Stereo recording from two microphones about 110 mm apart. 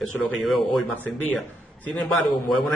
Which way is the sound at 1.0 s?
15° left (ahead or behind).